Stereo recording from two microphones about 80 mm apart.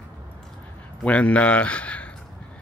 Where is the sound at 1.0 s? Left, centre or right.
Centre.